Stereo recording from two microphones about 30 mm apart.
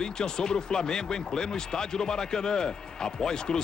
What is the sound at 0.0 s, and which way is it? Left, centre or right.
Speech, left.